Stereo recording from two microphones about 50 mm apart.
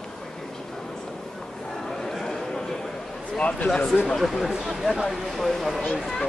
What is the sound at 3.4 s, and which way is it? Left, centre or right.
Speech, left.